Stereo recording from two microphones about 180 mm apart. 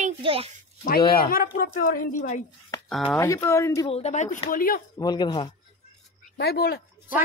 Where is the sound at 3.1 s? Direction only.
15° left (ahead or behind).